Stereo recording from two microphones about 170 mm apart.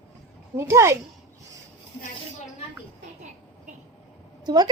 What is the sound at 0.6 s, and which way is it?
Speech, 15° right (ahead or behind).